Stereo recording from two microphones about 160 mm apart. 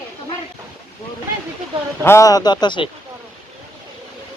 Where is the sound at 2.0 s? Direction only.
20° left (ahead or behind).